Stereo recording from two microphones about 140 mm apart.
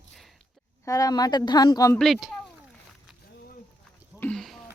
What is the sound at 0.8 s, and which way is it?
A woman's voice, 25° left (ahead or behind).